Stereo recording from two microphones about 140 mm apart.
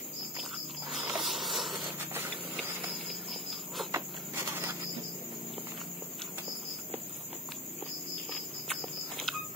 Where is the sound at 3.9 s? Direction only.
20° right (ahead or behind).